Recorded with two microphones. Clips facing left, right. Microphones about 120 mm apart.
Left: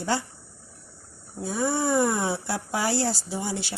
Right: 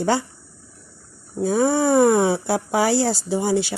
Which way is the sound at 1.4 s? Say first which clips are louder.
Right 8 dB; 90° right.